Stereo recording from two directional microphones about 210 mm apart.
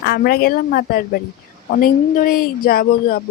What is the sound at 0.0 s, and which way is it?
Speech, 50° left (ahead or behind).